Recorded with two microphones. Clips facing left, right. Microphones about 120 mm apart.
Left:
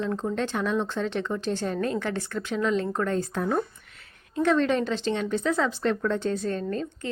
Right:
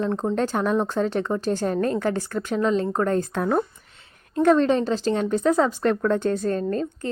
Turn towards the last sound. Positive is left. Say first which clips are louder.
# right 5 dB
turn(degrees=-40)  # may be behind; listen again after turning